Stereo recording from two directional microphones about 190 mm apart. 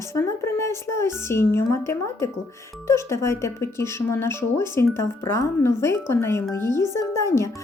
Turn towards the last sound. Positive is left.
turn(degrees=15)  # may be behind; listen again after turning